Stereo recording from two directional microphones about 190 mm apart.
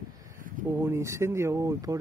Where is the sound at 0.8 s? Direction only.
15° right (ahead or behind).